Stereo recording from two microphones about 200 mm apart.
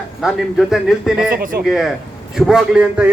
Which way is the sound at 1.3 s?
45° right (ahead or behind).